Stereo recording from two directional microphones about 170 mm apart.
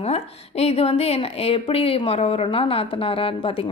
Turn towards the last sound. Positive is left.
turn(degrees=30)  # may be behind; listen again after turning